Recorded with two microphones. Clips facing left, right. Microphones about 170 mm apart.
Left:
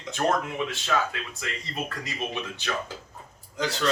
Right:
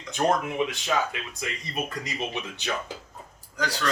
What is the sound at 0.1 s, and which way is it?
Speech, 15° right (ahead or behind).